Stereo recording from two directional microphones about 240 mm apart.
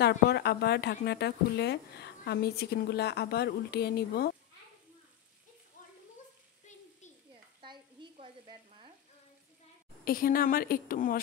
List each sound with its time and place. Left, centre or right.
0.0 s a woman's voice: left
5.8 s a sound: left
7.6 s frying: centre
10.0 s a woman's voice: left